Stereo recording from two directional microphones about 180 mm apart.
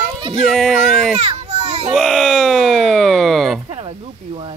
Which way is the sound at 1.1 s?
35° right (ahead or behind).